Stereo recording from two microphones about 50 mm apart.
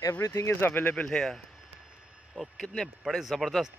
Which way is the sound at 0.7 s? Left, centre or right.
Left.